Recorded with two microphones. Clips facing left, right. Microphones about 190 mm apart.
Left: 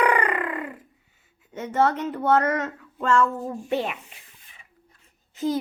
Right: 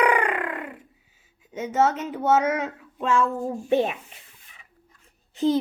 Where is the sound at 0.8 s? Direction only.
90° right.